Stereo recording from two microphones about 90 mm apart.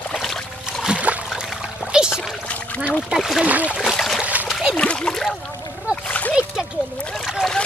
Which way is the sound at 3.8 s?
Centre (ahead or behind).